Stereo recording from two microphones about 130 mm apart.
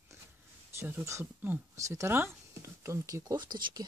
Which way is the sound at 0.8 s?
20° right (ahead or behind).